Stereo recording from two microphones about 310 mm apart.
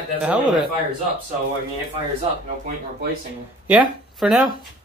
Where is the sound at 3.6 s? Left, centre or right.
Centre.